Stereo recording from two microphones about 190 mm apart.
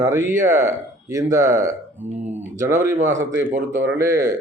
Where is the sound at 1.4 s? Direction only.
45° right (ahead or behind).